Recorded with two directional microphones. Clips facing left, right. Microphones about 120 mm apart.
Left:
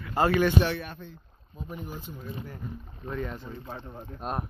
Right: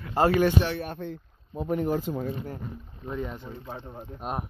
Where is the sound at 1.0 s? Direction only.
70° right (ahead or behind); by 2.3 s 90° right.